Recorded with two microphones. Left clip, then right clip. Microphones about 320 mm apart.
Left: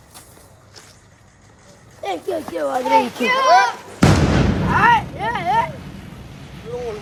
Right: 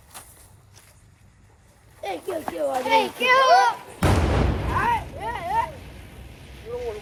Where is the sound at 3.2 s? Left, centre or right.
Right.